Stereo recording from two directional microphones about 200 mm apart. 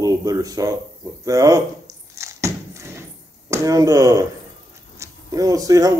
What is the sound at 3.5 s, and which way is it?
A man's voice, 15° right (ahead or behind).